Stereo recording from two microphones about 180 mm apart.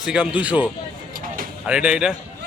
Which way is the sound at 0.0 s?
5° right (ahead or behind).